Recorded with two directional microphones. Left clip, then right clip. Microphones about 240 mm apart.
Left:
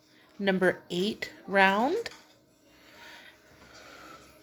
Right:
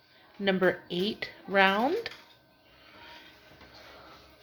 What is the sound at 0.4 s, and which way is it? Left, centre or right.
Speech, centre.